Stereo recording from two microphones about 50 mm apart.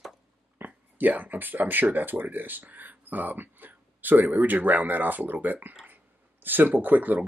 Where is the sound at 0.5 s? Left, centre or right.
Right.